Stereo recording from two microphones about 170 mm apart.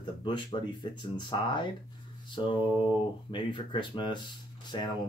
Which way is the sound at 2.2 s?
30° left (ahead or behind).